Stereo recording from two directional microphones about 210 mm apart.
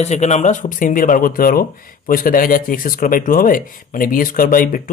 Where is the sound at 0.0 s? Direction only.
35° left (ahead or behind).